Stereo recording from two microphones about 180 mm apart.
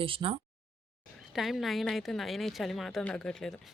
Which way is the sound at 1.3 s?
Centre (ahead or behind).